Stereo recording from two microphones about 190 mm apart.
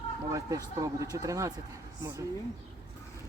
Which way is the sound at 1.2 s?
15° right (ahead or behind).